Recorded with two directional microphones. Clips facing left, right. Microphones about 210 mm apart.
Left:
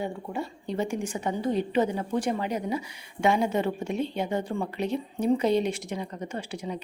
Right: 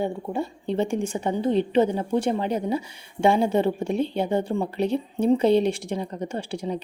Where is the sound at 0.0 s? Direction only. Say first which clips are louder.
Right 5 dB; 30° right (ahead or behind).